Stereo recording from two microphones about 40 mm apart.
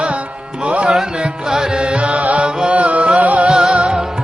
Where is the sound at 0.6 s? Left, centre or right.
Right.